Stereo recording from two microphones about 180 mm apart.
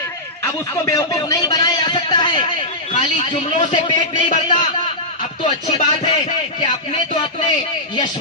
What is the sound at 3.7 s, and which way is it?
Speech, 25° left (ahead or behind).